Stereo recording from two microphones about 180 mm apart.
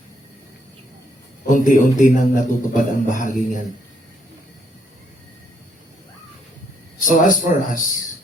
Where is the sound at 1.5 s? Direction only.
45° left (ahead or behind).